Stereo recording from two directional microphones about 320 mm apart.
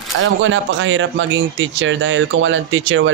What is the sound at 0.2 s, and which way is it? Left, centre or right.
Speech, right.